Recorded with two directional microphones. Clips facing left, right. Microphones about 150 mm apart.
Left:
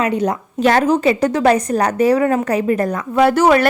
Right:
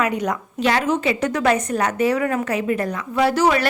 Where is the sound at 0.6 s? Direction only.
45° left (ahead or behind).